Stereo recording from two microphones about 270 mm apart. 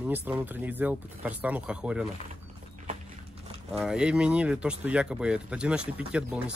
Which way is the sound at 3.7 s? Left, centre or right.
Centre.